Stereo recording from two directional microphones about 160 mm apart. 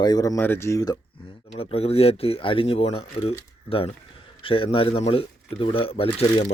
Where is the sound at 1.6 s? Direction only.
40° left (ahead or behind).